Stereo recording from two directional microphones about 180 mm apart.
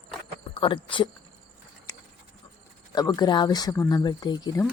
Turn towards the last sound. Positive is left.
turn(degrees=20)  # may be behind; listen again after turning